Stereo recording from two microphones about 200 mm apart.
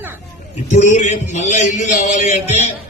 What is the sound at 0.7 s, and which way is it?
A man's voice, 35° left (ahead or behind).